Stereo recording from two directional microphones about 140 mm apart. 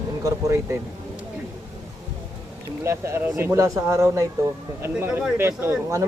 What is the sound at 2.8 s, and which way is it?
Speech, 20° right (ahead or behind).